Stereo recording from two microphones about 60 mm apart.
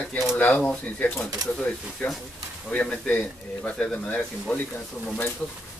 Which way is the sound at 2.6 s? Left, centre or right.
Centre.